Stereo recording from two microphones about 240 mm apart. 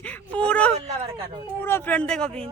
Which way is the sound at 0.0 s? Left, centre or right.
Centre.